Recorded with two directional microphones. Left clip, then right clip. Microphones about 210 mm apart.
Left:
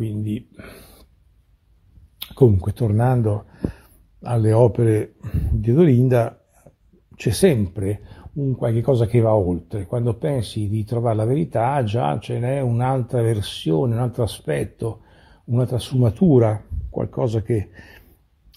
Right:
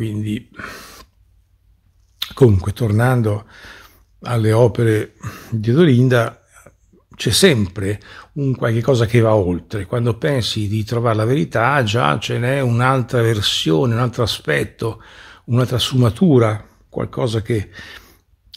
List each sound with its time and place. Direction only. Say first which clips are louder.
0.0 s speech: right 3 dB; centre (ahead or behind)
2.1 s speech: right 3 dB; centre (ahead or behind)